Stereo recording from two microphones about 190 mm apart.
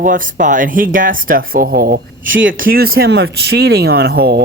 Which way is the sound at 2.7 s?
50° right (ahead or behind).